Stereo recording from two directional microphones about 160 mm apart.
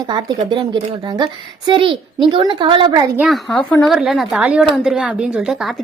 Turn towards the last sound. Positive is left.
turn(degrees=0)  # may be behind; listen again after turning